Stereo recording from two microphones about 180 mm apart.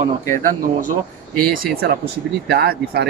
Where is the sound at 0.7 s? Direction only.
50° right (ahead or behind).